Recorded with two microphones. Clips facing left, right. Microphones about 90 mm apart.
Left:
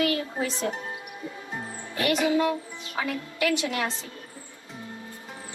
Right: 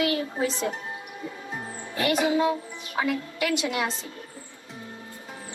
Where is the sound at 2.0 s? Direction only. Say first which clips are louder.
Even; 20° right (ahead or behind).